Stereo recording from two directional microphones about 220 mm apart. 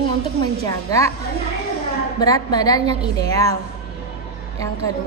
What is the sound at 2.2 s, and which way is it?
A woman's voice, 15° left (ahead or behind).